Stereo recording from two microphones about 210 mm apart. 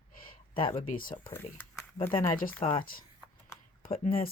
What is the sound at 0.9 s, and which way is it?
Speech, 40° left (ahead or behind).